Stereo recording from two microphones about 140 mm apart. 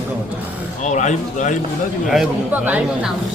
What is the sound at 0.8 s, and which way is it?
Speech, 60° left (ahead or behind).